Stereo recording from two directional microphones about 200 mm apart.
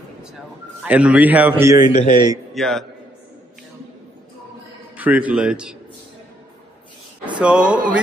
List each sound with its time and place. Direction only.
0.8 s a man's voice: 5° right (ahead or behind)
2.5 s a man's voice: centre (ahead or behind)
4.9 s speech: 5° right (ahead or behind)
7.3 s speech: 5° right (ahead or behind)